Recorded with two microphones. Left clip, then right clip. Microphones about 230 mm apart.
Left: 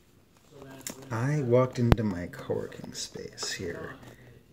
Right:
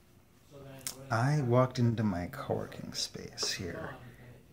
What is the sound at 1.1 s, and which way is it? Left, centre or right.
Speech, centre.